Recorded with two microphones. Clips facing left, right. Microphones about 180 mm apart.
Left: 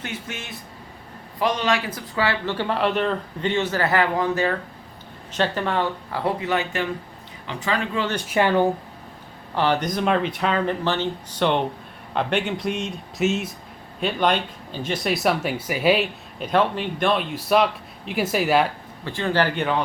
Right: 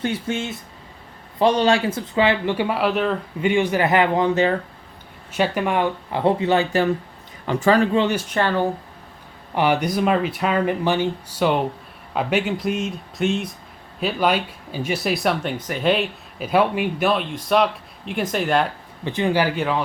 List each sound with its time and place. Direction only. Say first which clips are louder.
0.0 s speech: right 9 dB; 30° right (ahead or behind)
5.3 s speech: right 2 dB; 10° right (ahead or behind); by 6.8 s 30° right (ahead or behind)
7.4 s speech: right 9 dB; 45° right (ahead or behind)
8.3 s speech: left 2 dB; 15° left (ahead or behind)
9.6 s speech: right 2 dB; 10° right (ahead or behind); by 18.7 s 5° left (ahead or behind)
19.0 s speech: right 2 dB; 15° right (ahead or behind)